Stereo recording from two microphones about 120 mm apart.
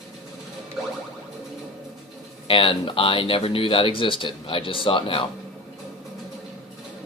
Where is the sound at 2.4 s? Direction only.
45° left (ahead or behind).